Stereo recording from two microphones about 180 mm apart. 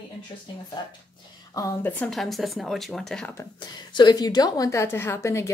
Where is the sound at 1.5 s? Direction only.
15° left (ahead or behind).